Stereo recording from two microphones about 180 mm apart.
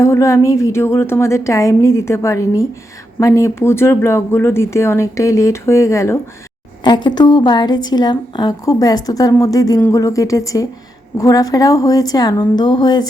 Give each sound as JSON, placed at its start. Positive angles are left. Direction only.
{"t": 0.0, "sound": "a woman's voice", "side_deg": 15}